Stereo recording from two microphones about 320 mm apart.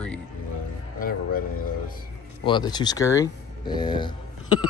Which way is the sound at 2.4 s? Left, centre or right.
Centre.